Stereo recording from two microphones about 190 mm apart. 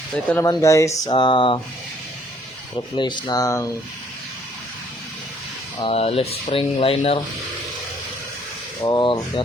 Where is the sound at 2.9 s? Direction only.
25° left (ahead or behind).